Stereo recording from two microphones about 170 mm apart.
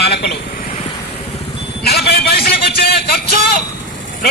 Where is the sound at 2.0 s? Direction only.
70° left (ahead or behind).